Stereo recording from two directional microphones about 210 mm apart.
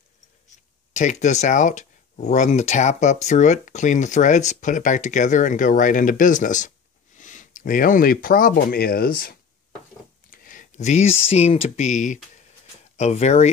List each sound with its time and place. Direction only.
0.9 s speech: 35° left (ahead or behind)